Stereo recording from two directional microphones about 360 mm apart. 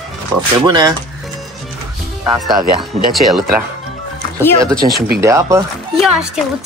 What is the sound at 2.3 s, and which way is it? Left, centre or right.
Speech, centre.